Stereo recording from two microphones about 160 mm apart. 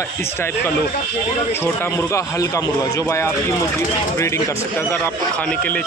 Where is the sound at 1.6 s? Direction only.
15° left (ahead or behind).